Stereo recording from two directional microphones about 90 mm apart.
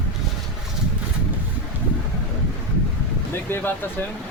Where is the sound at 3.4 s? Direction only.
25° left (ahead or behind).